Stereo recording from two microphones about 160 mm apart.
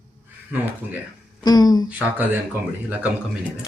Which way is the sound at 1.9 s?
10° right (ahead or behind).